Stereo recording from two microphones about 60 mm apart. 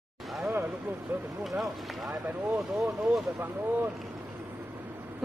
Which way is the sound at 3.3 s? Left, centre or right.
Right.